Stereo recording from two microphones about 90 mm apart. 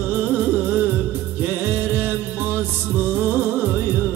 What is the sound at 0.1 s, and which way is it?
Music, 20° right (ahead or behind).